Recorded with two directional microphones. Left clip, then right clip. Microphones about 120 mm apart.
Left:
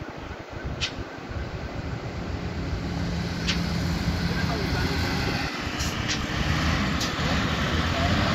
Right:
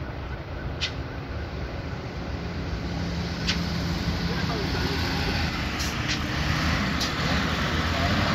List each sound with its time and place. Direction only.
5.3 s a sound: 75° left (ahead or behind)
5.8 s vehicle: 20° left (ahead or behind)
6.2 s vehicle: 5° left (ahead or behind)